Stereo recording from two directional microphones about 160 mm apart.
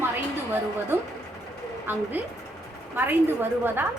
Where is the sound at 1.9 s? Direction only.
10° right (ahead or behind).